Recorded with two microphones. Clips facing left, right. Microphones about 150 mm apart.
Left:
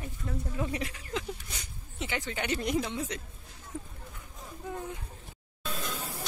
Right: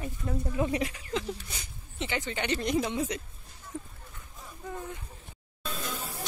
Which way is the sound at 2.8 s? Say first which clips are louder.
Right 3 dB; 10° right (ahead or behind).